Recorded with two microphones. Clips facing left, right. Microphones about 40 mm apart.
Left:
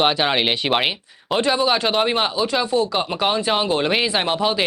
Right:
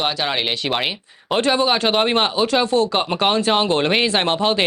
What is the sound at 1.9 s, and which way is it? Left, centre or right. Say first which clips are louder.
Speech: right 2 dB; centre.